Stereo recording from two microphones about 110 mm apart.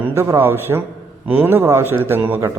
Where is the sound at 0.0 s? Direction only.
25° right (ahead or behind).